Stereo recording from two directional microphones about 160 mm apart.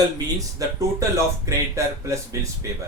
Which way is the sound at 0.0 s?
20° right (ahead or behind).